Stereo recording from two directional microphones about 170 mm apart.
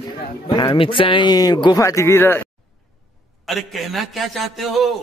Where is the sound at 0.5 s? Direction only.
25° left (ahead or behind).